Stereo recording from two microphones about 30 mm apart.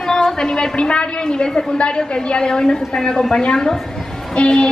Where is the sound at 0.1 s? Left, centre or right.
Centre.